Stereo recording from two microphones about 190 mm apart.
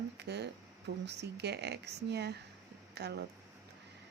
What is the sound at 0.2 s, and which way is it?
A woman's voice, 60° right (ahead or behind).